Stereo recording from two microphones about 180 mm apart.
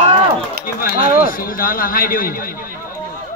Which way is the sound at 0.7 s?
50° left (ahead or behind).